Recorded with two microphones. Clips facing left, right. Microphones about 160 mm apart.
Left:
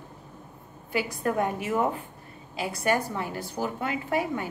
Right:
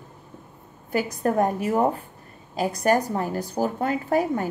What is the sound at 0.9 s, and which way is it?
A woman's voice, 40° right (ahead or behind).